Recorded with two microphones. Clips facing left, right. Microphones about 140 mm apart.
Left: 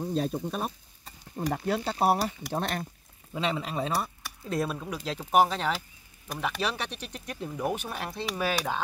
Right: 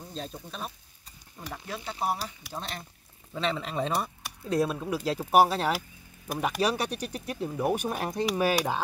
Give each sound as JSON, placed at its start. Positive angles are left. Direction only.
{"t": 0.0, "sound": "speech", "side_deg": 55}
{"t": 3.3, "sound": "speech", "side_deg": 10}